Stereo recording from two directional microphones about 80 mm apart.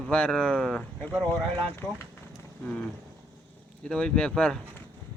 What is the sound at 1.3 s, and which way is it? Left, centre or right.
Speech, left.